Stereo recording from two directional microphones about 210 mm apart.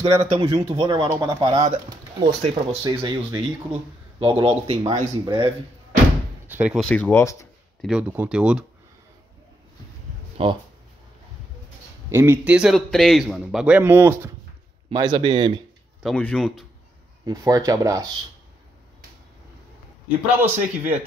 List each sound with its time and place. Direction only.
0.0 s speech: 25° right (ahead or behind)
6.4 s a man's voice: 10° right (ahead or behind); by 7.4 s 15° left (ahead or behind)
7.8 s a man's voice: 5° right (ahead or behind)
10.3 s speech: 25° right (ahead or behind)
12.1 s a man's voice: 10° right (ahead or behind)
14.9 s speech: 20° right (ahead or behind)
16.0 s a man's voice: 5° left (ahead or behind)
17.2 s speech: 15° right (ahead or behind)
20.3 s speech: 10° right (ahead or behind)